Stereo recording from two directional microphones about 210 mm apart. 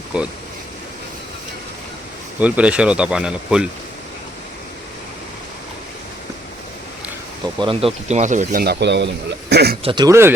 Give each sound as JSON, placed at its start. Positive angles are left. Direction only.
{"t": 2.4, "sound": "speech", "side_deg": -5}
{"t": 7.6, "sound": "speech", "side_deg": -25}
{"t": 9.8, "sound": "speech", "side_deg": -20}